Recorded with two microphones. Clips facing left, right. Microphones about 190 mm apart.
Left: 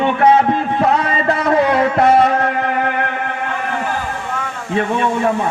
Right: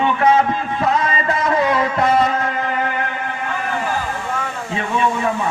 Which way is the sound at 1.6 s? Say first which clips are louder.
Left 5 dB; 60° left (ahead or behind).